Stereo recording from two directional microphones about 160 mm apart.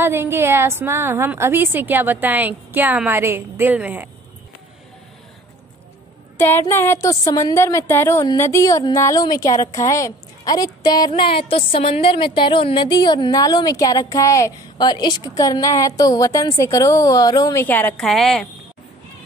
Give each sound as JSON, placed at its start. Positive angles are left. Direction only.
{"t": 0.0, "sound": "a woman's voice", "side_deg": -15}
{"t": 6.3, "sound": "music", "side_deg": 15}
{"t": 17.6, "sound": "a woman's voice", "side_deg": 10}